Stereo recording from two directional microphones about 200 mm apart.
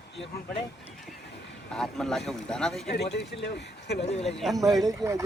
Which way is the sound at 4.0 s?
30° left (ahead or behind).